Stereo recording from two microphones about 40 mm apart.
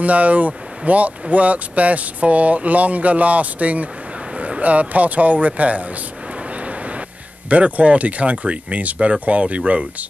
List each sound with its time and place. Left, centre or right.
0.0 s speech: right
7.4 s speech: right